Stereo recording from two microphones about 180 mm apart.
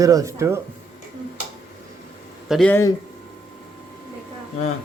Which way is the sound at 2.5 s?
Centre (ahead or behind).